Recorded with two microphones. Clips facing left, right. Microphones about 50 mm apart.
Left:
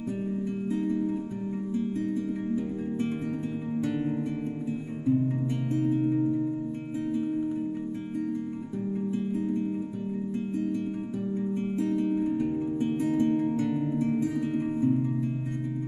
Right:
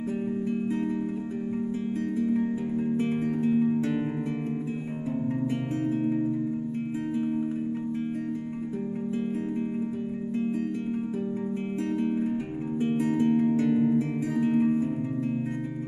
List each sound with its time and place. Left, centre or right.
3.4 s music: right
5.9 s music: right
11.9 s music: right